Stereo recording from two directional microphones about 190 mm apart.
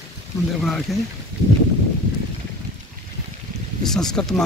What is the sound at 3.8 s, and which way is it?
Speech, centre (ahead or behind).